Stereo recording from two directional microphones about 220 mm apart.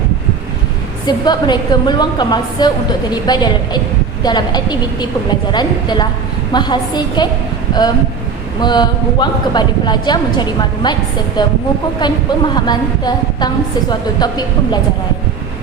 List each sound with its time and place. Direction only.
1.0 s a woman's voice: 20° left (ahead or behind)